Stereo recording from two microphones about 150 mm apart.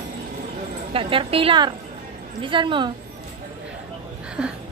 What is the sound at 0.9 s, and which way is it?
A woman's voice, 35° right (ahead or behind).